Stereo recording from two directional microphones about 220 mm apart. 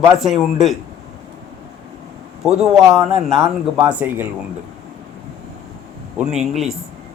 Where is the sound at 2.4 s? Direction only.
Centre (ahead or behind).